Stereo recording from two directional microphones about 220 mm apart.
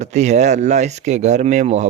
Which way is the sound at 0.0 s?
30° right (ahead or behind).